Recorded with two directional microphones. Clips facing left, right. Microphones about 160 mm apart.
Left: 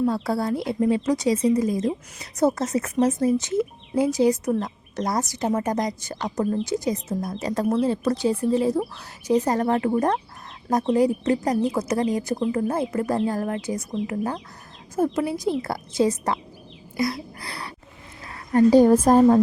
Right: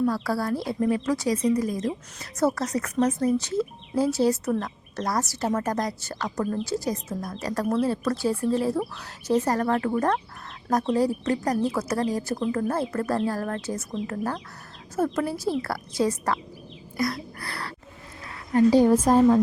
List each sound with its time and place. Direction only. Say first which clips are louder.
0.0 s speech: left 2 dB; 25° left (ahead or behind)
17.4 s a sound: even; 20° left (ahead or behind)
18.3 s a woman's voice: left 3 dB; 45° left (ahead or behind)